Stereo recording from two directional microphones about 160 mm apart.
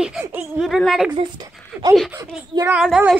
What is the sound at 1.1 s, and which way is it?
Speech, 25° right (ahead or behind).